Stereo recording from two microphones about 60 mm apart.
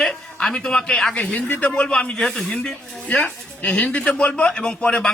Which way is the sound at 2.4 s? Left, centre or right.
Left.